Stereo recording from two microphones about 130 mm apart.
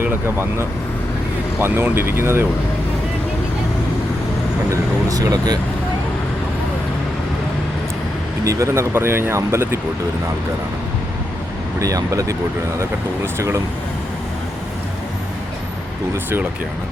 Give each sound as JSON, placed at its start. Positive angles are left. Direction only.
{"t": 0.0, "sound": "speech", "side_deg": -15}
{"t": 1.5, "sound": "speech", "side_deg": -15}
{"t": 4.7, "sound": "speech", "side_deg": -25}
{"t": 8.4, "sound": "speech", "side_deg": -25}
{"t": 11.8, "sound": "speech", "side_deg": -25}
{"t": 16.1, "sound": "speech", "side_deg": -15}